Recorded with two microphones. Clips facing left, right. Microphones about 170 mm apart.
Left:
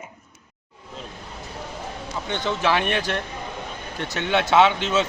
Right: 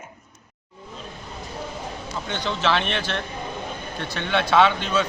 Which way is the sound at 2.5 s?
10° left (ahead or behind).